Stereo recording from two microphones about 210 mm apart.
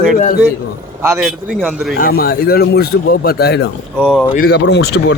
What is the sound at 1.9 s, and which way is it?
A man's voice, 45° left (ahead or behind).